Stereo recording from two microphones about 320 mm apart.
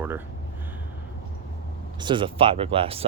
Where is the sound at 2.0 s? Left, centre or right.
Centre.